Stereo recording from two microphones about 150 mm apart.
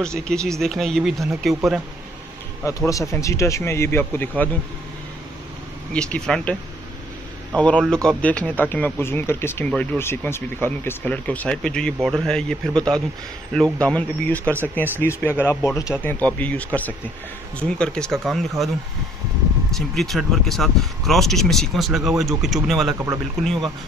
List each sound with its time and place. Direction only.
0.0 s speech: 5° left (ahead or behind)
2.6 s speech: 20° left (ahead or behind)
5.9 s speech: 5° left (ahead or behind)
7.5 s speech: 10° left (ahead or behind)
19.7 s speech: centre (ahead or behind)